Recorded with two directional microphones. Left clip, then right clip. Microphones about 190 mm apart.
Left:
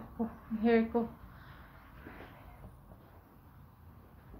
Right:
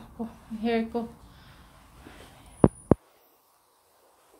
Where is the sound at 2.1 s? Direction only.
15° right (ahead or behind).